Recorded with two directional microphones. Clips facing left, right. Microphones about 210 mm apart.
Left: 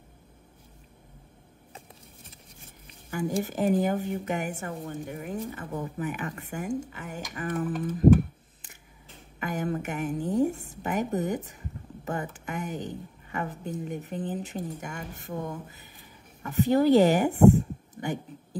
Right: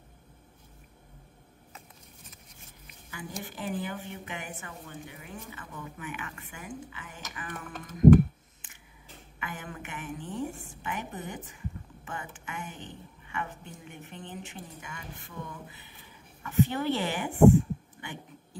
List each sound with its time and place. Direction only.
3.1 s a woman's voice: 45° left (ahead or behind)
9.4 s a woman's voice: 40° left (ahead or behind)